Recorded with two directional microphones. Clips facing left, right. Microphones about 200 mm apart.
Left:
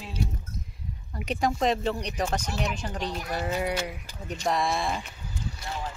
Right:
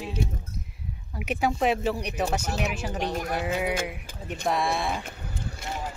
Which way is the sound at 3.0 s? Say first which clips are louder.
Right 5 dB; 50° right (ahead or behind).